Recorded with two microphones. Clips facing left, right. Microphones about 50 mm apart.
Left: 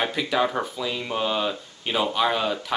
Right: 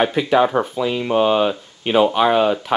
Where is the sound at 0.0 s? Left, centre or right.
Right.